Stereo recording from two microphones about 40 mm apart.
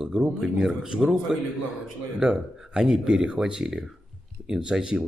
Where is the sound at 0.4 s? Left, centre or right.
Centre.